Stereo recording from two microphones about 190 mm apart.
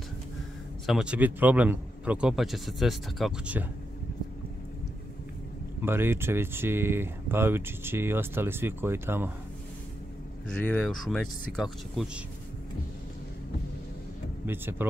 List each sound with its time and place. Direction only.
0.8 s a man's voice: 5° right (ahead or behind)
5.8 s speech: 10° right (ahead or behind)
10.6 s a man's voice: 10° left (ahead or behind)
14.4 s speech: 10° right (ahead or behind)